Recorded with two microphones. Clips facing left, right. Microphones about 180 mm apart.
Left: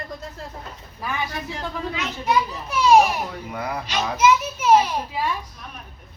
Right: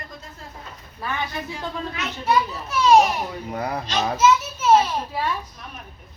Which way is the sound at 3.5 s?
35° right (ahead or behind).